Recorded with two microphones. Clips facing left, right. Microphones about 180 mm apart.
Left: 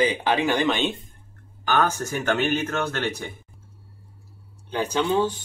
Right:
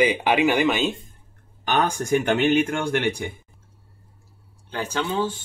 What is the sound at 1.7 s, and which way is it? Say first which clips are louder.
Speech: right 2 dB; 15° right (ahead or behind).